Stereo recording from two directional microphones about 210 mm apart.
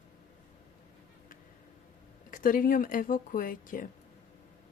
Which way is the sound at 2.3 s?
40° left (ahead or behind).